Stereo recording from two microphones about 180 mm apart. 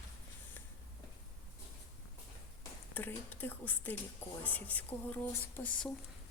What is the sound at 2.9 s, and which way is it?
Speech, 10° left (ahead or behind).